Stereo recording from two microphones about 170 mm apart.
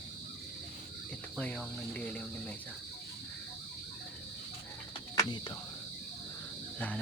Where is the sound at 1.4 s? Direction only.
10° left (ahead or behind).